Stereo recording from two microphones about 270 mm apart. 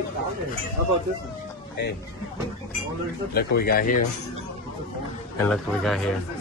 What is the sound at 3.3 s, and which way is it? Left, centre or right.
Speech, left.